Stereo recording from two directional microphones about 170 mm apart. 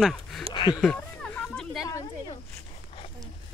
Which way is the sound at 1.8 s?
20° left (ahead or behind).